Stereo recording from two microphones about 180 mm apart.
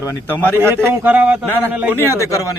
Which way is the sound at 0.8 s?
10° right (ahead or behind).